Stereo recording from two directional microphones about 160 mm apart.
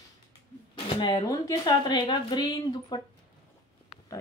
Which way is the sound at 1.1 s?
20° left (ahead or behind).